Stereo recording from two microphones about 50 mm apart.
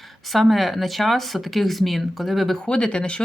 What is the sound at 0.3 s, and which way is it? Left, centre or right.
Speech, centre.